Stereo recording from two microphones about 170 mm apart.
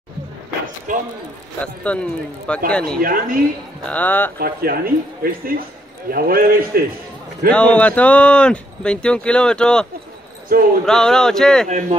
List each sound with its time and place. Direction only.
0.9 s speech: 50° right (ahead or behind)
1.6 s speech: 10° left (ahead or behind)
3.0 s speech: 55° right (ahead or behind)
3.8 s speech: 10° left (ahead or behind)
4.4 s speech: 60° right (ahead or behind)
7.5 s speech: 5° left (ahead or behind)
10.5 s speech: 55° right (ahead or behind)
10.9 s speech: 5° left (ahead or behind)